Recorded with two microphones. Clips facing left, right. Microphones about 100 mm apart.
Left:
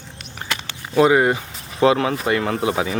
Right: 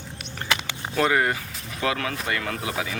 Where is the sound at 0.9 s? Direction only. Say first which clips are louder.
Left 7 dB; 20° left (ahead or behind).